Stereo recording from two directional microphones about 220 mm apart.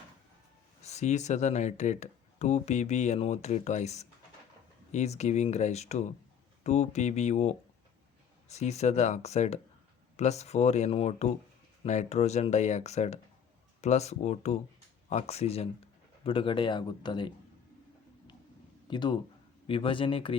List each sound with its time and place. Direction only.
0.8 s speech: 30° left (ahead or behind)
18.9 s speech: 20° left (ahead or behind)